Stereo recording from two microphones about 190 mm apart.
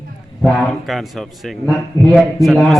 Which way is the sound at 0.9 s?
Centre (ahead or behind).